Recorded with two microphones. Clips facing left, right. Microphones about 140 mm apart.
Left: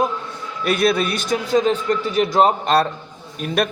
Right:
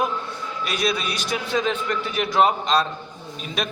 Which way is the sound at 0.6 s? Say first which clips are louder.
Left 7 dB; 55° left (ahead or behind).